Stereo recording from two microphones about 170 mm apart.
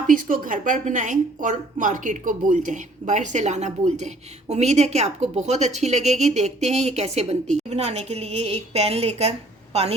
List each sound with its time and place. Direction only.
0.1 s a woman's voice: 50° right (ahead or behind)